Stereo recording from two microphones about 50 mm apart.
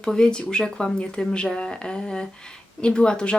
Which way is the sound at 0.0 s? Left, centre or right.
Centre.